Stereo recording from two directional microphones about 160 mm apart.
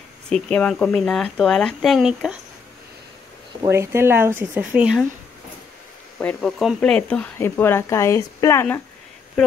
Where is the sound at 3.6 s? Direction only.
15° right (ahead or behind).